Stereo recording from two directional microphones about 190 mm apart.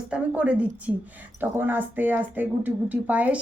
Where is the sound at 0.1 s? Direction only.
5° right (ahead or behind).